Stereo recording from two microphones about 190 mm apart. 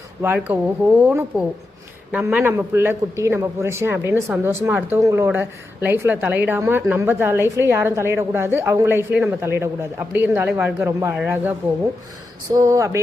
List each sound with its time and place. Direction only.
0.2 s a man's voice: 10° right (ahead or behind)